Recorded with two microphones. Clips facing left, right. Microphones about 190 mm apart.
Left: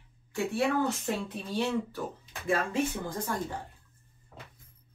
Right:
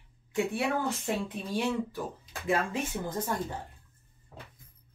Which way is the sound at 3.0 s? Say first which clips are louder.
Right 1 dB; 25° right (ahead or behind).